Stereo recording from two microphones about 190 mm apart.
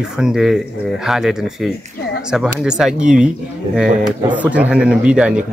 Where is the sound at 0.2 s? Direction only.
Centre (ahead or behind).